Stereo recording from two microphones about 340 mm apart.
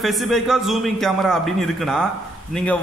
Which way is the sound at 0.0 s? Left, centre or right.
Centre.